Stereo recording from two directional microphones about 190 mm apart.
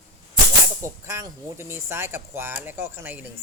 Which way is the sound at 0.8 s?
15° right (ahead or behind).